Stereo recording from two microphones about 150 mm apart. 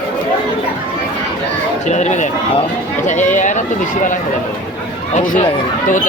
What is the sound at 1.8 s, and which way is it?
Speech, 50° left (ahead or behind).